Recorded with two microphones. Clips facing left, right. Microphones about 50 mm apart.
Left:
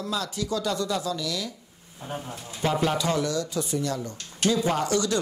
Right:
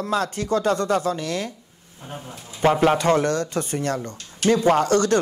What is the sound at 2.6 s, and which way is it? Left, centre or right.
A man's voice, right.